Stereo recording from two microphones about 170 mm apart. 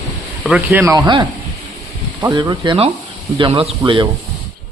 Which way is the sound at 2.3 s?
25° right (ahead or behind).